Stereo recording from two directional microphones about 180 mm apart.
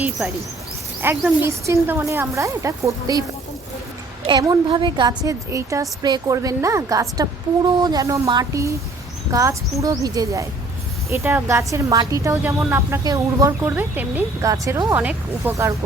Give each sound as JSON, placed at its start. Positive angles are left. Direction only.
{"t": 1.0, "sound": "a woman's voice", "side_deg": -15}
{"t": 4.3, "sound": "a woman's voice", "side_deg": -25}